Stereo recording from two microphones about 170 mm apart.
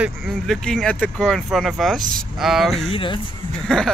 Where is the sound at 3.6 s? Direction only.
5° left (ahead or behind).